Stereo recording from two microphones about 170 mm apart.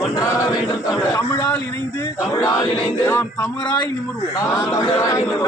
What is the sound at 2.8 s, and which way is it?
Chant, 15° left (ahead or behind).